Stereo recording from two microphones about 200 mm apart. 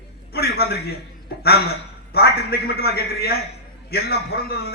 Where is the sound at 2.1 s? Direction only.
50° left (ahead or behind).